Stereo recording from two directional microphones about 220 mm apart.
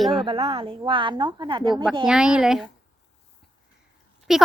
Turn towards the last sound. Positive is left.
turn(degrees=0)  # may be behind; listen again after turning